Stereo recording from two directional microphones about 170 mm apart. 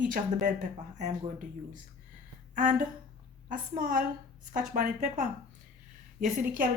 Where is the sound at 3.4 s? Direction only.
50° right (ahead or behind).